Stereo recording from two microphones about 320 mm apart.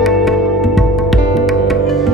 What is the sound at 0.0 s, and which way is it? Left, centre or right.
Music, centre.